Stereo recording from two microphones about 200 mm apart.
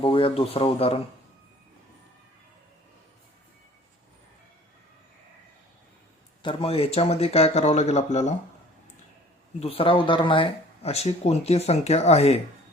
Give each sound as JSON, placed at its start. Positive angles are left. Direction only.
{"t": 0.0, "sound": "speech", "side_deg": 25}
{"t": 6.4, "sound": "speech", "side_deg": 25}
{"t": 9.6, "sound": "speech", "side_deg": 30}